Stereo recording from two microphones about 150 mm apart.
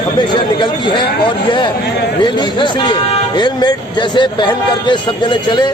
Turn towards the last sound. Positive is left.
turn(degrees=30)  # may be behind; listen again after turning